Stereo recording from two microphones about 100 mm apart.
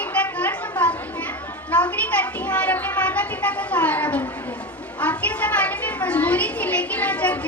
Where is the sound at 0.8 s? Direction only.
15° left (ahead or behind).